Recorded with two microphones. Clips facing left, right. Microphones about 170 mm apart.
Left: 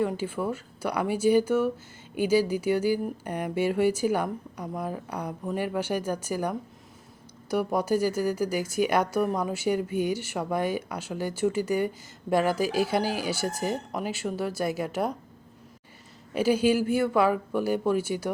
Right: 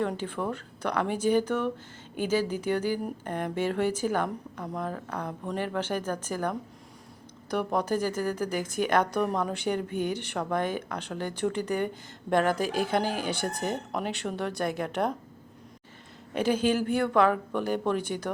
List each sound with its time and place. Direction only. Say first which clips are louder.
0.0 s speech: left 2 dB; 5° left (ahead or behind)
16.3 s speech: left 3 dB; 10° left (ahead or behind)